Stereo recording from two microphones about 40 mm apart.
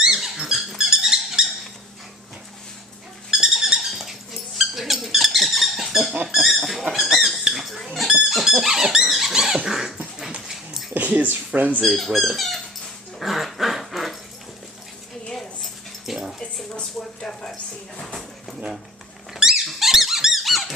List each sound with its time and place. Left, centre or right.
0.0 s squeak: centre
0.7 s dog: centre
3.3 s a sound: centre
4.0 s dog: centre
6.2 s pig: centre
8.3 s dog: centre
9.3 s rodents: centre
9.7 s dog: centre
10.9 s a sound: right
11.8 s speech: centre
13.2 s dog: centre
16.1 s dog: centre
19.3 s squeak: centre